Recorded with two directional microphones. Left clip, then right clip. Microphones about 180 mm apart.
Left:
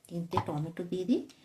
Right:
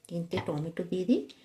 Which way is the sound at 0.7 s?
20° right (ahead or behind).